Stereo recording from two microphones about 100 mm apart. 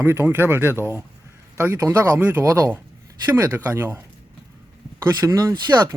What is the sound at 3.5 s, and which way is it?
Speech, 20° right (ahead or behind).